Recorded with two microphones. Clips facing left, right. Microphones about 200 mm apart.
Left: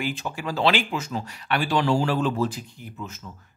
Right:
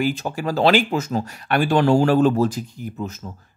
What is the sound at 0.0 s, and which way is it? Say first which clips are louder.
Speech: right 7 dB; 40° right (ahead or behind).